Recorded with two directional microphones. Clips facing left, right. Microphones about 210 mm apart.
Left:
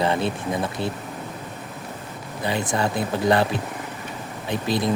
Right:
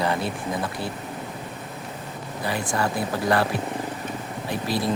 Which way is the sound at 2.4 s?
20° left (ahead or behind).